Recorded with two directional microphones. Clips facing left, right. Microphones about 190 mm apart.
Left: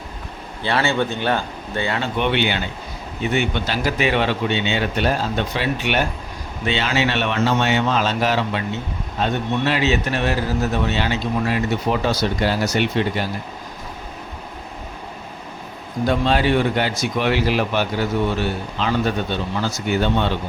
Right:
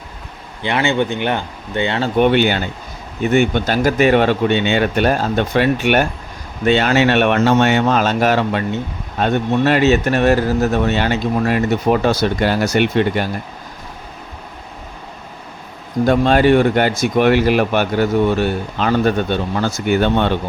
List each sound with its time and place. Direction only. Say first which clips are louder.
0.6 s speech: right 3 dB; 20° right (ahead or behind)
2.0 s speech: right 9 dB; 45° right (ahead or behind)
16.0 s speech: right 6 dB; 50° right (ahead or behind)